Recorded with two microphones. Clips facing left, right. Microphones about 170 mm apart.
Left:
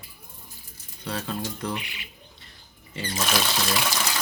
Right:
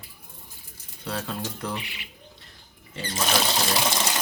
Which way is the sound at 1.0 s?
5° right (ahead or behind).